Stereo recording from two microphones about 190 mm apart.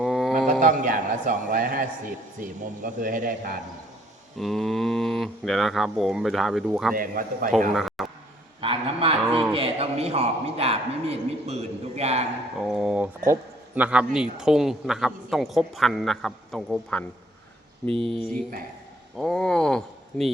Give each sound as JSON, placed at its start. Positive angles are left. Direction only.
{"t": 0.0, "sound": "a sound", "side_deg": 0}
{"t": 0.6, "sound": "a man's voice", "side_deg": -45}
{"t": 4.4, "sound": "a man's voice", "side_deg": 0}
{"t": 6.9, "sound": "a man's voice", "side_deg": -45}
{"t": 7.7, "sound": "a man's voice", "side_deg": 0}
{"t": 8.6, "sound": "a man's voice", "side_deg": -30}
{"t": 12.6, "sound": "a man's voice", "side_deg": 0}
{"t": 17.8, "sound": "speech", "side_deg": -30}
{"t": 19.1, "sound": "speech", "side_deg": 0}